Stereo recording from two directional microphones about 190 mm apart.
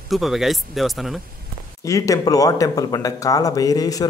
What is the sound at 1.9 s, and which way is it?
Speech, 15° left (ahead or behind).